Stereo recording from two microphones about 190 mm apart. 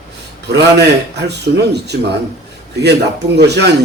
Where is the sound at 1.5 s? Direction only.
60° right (ahead or behind).